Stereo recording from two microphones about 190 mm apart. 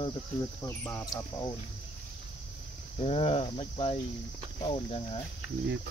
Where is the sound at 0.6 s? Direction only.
10° left (ahead or behind).